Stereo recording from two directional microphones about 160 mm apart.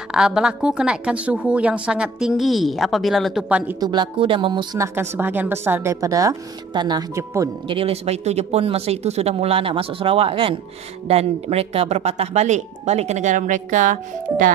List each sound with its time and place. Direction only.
0.1 s a woman's voice: 5° right (ahead or behind)
3.8 s a woman's voice: 30° right (ahead or behind)
4.7 s a woman's voice: 15° right (ahead or behind)
7.6 s speech: 35° right (ahead or behind); by 14.5 s 55° right (ahead or behind)